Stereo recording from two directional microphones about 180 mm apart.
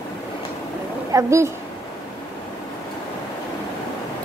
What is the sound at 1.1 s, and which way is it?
Speech, 15° right (ahead or behind).